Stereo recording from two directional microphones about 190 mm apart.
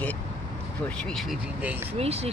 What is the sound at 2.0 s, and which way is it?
Speech, 30° right (ahead or behind).